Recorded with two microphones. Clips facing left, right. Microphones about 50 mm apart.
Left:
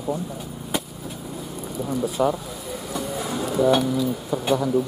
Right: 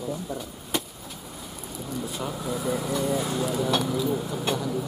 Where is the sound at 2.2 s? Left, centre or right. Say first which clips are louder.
Left 15 dB; left.